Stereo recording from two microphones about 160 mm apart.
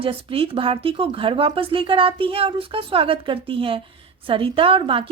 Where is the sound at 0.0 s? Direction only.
35° right (ahead or behind).